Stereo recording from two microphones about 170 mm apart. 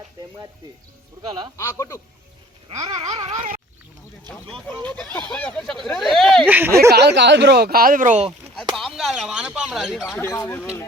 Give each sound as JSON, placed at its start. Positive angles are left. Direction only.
{"t": 1.2, "sound": "a sound", "side_deg": -25}
{"t": 1.5, "sound": "speech", "side_deg": 15}
{"t": 2.6, "sound": "a sound", "side_deg": -25}
{"t": 3.1, "sound": "a sound", "side_deg": -35}
{"t": 4.9, "sound": "speech", "side_deg": 5}
{"t": 6.5, "sound": "speech", "side_deg": -10}
{"t": 6.9, "sound": "speech", "side_deg": -85}
{"t": 8.7, "sound": "speech", "side_deg": 0}
{"t": 10.2, "sound": "speech", "side_deg": 15}